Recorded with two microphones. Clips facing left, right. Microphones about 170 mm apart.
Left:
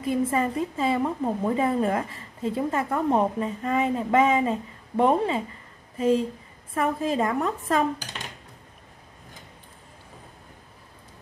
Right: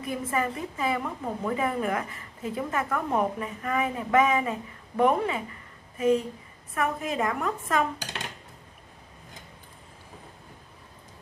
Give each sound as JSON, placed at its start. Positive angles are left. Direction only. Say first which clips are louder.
{"t": 0.0, "sound": "a woman's voice", "louder": "left 5 dB", "side_deg": 25}